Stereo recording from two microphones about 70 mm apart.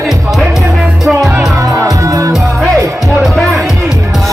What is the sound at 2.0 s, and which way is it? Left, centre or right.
Music, right.